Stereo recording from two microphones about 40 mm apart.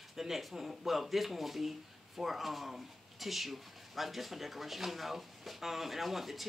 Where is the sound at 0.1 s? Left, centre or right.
Centre.